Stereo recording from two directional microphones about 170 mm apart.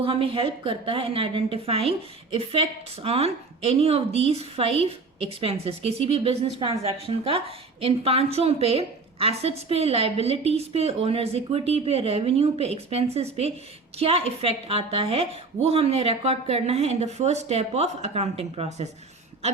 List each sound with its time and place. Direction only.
0.0 s a woman's voice: 30° right (ahead or behind)